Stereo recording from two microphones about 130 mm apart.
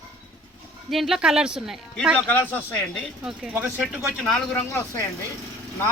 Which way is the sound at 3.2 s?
5° right (ahead or behind).